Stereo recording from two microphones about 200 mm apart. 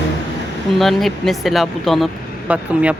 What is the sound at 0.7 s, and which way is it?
Speech, centre (ahead or behind).